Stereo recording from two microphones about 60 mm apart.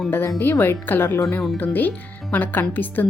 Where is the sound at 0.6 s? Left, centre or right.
Left.